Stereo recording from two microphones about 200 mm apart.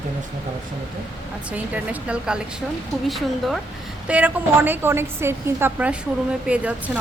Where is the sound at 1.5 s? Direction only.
5° right (ahead or behind).